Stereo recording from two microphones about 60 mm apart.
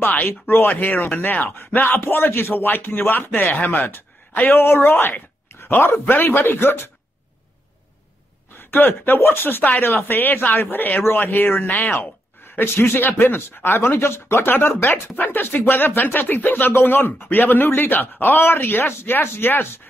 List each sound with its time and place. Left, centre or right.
0.0 s speech: left
8.5 s speech: left